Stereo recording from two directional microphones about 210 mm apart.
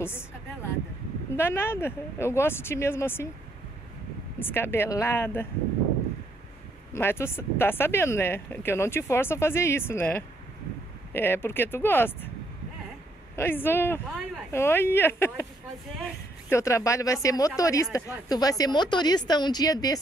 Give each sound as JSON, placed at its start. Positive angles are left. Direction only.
{"t": 1.3, "sound": "speech", "side_deg": 10}
{"t": 4.4, "sound": "speech", "side_deg": 10}
{"t": 6.9, "sound": "speech", "side_deg": 10}
{"t": 13.4, "sound": "speech", "side_deg": 10}
{"t": 16.4, "sound": "speech", "side_deg": 15}